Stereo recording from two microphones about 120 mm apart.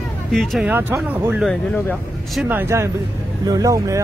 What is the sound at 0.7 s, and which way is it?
Speech, 15° right (ahead or behind).